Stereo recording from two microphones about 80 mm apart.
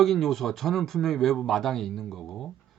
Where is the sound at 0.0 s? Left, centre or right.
Centre.